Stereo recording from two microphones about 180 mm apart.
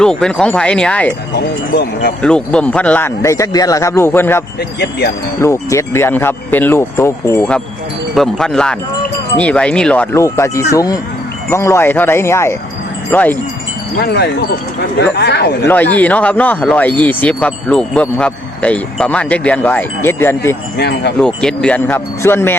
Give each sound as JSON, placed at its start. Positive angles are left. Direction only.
{"t": 0.0, "sound": "speech", "side_deg": 5}
{"t": 1.7, "sound": "speech", "side_deg": 60}
{"t": 2.2, "sound": "speech", "side_deg": 5}
{"t": 4.8, "sound": "speech", "side_deg": 65}
{"t": 5.4, "sound": "speech", "side_deg": 15}
{"t": 14.0, "sound": "speech", "side_deg": 65}
{"t": 15.6, "sound": "speech", "side_deg": 10}
{"t": 20.7, "sound": "speech", "side_deg": 65}
{"t": 21.2, "sound": "speech", "side_deg": 5}